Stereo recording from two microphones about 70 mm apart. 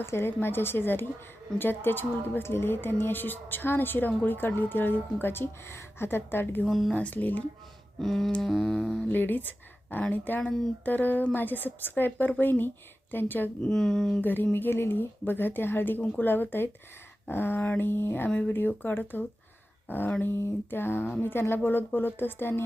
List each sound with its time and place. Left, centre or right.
0.0 s a woman's voice: left
6.7 s speech: centre
6.9 s a woman's voice: left
8.0 s speech: centre
8.4 s music: centre
9.0 s a woman's voice: left
13.6 s music: centre
14.2 s a woman's voice: left